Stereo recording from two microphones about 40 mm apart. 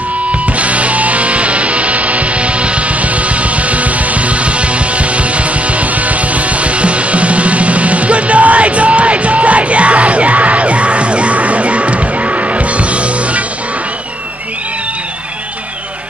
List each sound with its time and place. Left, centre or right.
0.6 s music: right